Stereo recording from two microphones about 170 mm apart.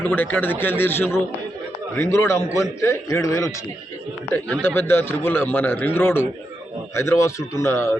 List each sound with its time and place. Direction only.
0.0 s a man's voice: 10° left (ahead or behind)
4.3 s a man's voice: 10° left (ahead or behind)